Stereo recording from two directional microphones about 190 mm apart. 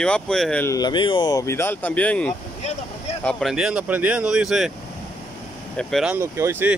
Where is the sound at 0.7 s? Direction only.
20° left (ahead or behind); by 4.7 s centre (ahead or behind).